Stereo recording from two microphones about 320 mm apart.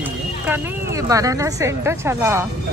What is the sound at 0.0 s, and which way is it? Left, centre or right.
A woman's voice, centre.